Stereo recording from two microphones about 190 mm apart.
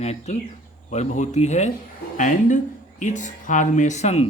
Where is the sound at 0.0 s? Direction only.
35° left (ahead or behind).